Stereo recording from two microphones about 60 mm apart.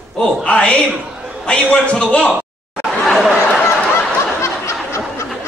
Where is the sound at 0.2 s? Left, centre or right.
Centre.